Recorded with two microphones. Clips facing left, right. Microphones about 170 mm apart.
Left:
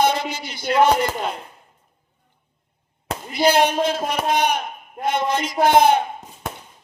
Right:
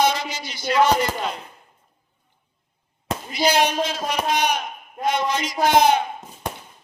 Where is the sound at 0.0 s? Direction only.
55° left (ahead or behind).